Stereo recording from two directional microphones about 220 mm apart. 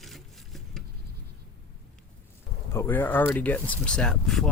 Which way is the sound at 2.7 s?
10° left (ahead or behind).